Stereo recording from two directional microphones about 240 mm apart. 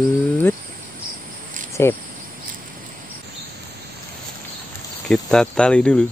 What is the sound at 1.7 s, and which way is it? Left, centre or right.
Cricket, centre.